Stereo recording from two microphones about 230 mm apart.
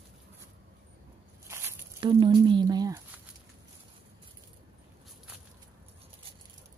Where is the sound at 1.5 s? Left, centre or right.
Centre.